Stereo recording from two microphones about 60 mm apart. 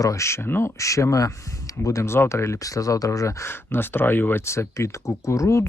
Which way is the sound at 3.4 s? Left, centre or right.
Left.